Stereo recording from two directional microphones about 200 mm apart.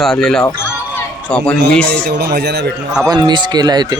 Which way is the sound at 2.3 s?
55° right (ahead or behind).